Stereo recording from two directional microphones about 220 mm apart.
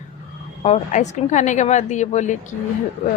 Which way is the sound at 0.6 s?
30° left (ahead or behind).